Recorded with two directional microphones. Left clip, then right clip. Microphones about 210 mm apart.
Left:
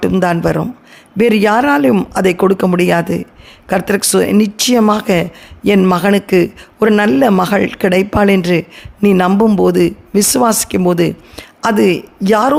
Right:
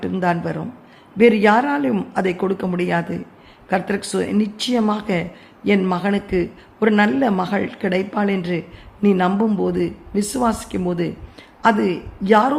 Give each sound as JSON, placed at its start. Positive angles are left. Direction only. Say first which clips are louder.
{"t": 0.0, "sound": "speech", "louder": "left 8 dB", "side_deg": 45}